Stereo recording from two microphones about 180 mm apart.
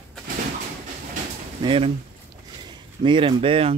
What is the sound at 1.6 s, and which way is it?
Speech, 30° right (ahead or behind).